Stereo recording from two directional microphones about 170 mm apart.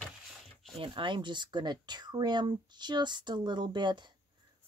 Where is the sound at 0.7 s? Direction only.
30° right (ahead or behind).